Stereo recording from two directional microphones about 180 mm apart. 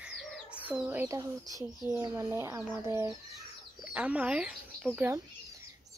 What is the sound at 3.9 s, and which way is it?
Speech, 5° right (ahead or behind).